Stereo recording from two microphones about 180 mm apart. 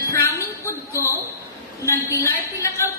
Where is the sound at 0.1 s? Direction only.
15° left (ahead or behind).